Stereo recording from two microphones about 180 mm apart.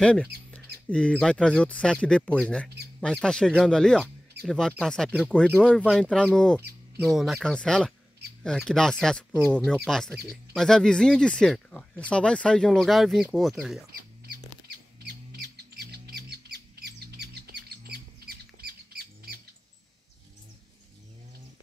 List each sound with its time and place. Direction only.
0.0 s speech: 5° left (ahead or behind)
14.7 s squawk: 65° right (ahead or behind)